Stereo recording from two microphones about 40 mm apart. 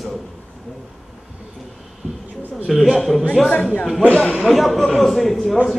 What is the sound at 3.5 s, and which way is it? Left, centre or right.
A man's voice, left.